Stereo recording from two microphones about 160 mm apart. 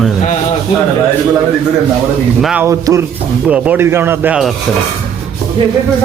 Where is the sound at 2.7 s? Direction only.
20° right (ahead or behind).